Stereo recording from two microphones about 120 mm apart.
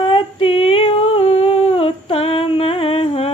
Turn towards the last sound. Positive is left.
turn(degrees=50)  # may be behind; listen again after turning